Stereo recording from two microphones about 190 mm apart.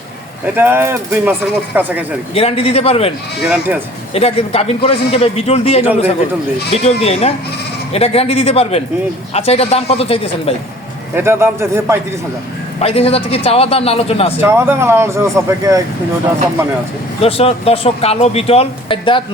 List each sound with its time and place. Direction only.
0.5 s speech: 10° right (ahead or behind)
2.3 s speech: 30° left (ahead or behind)
3.4 s speech: 5° right (ahead or behind)
4.1 s speech: 30° left (ahead or behind)
11.1 s speech: 15° right (ahead or behind)
12.8 s speech: 30° left (ahead or behind)
14.4 s speech: 15° right (ahead or behind)
17.2 s speech: 30° left (ahead or behind)